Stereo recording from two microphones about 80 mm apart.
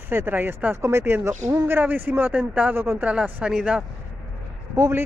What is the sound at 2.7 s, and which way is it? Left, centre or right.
Speech, right.